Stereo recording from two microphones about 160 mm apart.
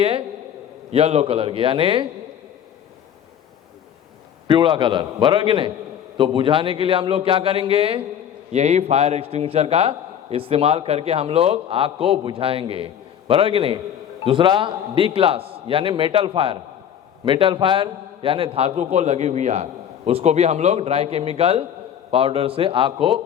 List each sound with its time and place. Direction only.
0.9 s a man's voice: 40° right (ahead or behind)
4.4 s a man's voice: 30° right (ahead or behind)